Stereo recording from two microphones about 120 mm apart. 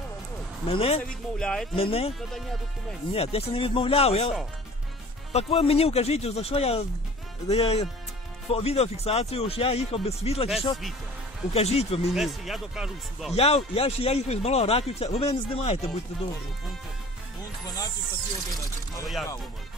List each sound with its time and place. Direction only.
0.7 s speech: 55° left (ahead or behind)
1.0 s speech: 5° left (ahead or behind)
1.8 s speech: 55° left (ahead or behind)
2.1 s speech: centre (ahead or behind)
3.1 s speech: 55° left (ahead or behind)
5.3 s speech: 55° left (ahead or behind)
11.5 s speech: 60° left (ahead or behind)
12.1 s speech: centre (ahead or behind)
13.3 s speech: 60° left (ahead or behind)
17.6 s speech: 35° left (ahead or behind)